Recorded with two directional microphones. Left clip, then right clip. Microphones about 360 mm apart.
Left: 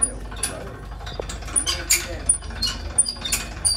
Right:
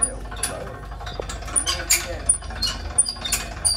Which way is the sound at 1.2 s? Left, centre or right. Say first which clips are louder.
Even; centre.